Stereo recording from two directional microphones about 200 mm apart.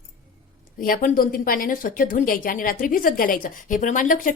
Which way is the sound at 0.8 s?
45° left (ahead or behind).